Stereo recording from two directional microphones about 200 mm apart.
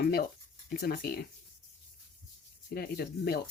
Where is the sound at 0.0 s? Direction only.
50° left (ahead or behind).